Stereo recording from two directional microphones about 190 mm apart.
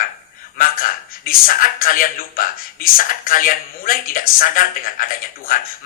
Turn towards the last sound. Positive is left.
turn(degrees=50)  # may be behind; listen again after turning